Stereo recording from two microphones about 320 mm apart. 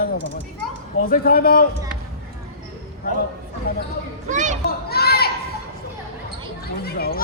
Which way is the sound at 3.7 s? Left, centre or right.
Left.